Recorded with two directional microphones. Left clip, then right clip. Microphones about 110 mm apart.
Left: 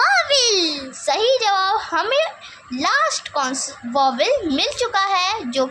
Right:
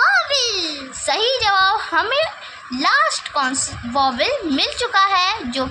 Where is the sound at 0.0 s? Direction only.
85° left.